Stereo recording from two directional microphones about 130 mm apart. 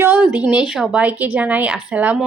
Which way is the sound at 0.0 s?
15° right (ahead or behind).